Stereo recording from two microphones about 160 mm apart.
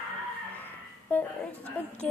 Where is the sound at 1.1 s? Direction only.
10° left (ahead or behind).